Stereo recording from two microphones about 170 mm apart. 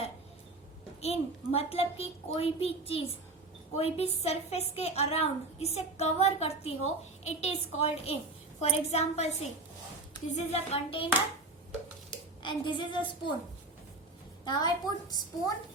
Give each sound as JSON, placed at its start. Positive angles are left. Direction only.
{"t": 1.0, "sound": "a woman's voice", "side_deg": 35}
{"t": 12.4, "sound": "a child's voice", "side_deg": 30}
{"t": 14.4, "sound": "a child's voice", "side_deg": 25}